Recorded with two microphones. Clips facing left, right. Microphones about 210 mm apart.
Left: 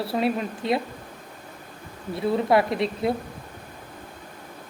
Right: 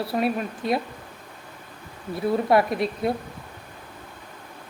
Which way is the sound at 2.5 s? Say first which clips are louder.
Right 1 dB; 25° left (ahead or behind).